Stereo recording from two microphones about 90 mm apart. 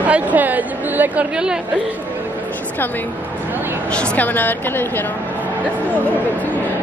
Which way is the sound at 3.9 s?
15° left (ahead or behind).